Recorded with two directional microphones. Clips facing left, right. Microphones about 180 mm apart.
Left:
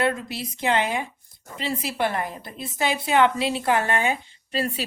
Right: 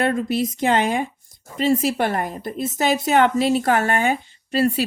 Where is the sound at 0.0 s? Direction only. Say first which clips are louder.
Right 5 dB; 50° right (ahead or behind).